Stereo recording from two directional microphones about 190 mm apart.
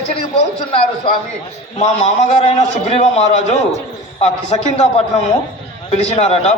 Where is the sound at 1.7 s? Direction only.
35° left (ahead or behind).